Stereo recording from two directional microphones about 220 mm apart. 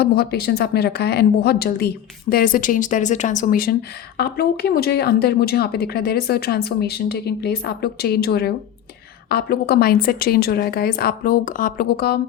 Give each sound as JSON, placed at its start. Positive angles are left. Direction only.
{"t": 0.0, "sound": "speech", "side_deg": 45}